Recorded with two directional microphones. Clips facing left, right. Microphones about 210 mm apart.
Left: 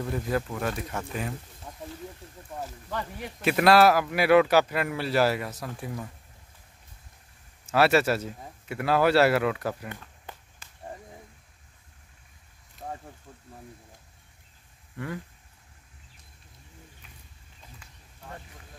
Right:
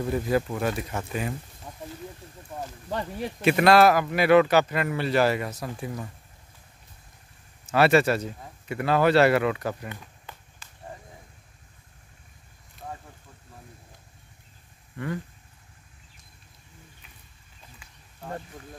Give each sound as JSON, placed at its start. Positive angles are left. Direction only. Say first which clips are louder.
{"t": 0.0, "sound": "speech", "louder": "right 4 dB", "side_deg": -10}
{"t": 2.9, "sound": "speech", "louder": "right 6 dB", "side_deg": -30}
{"t": 3.4, "sound": "speech", "louder": "right 1 dB", "side_deg": 0}
{"t": 7.7, "sound": "speech", "louder": "right 2 dB", "side_deg": 5}
{"t": 10.6, "sound": "a sound", "louder": "right 2 dB", "side_deg": 55}